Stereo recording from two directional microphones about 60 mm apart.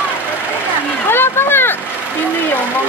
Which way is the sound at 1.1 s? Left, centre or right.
Left.